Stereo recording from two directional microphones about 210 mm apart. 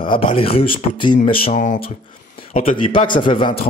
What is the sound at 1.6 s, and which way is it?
Speech, 40° left (ahead or behind).